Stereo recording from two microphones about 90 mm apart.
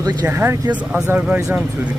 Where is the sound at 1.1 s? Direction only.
20° right (ahead or behind).